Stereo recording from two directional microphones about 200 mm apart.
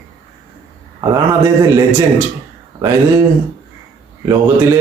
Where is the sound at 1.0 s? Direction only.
15° right (ahead or behind).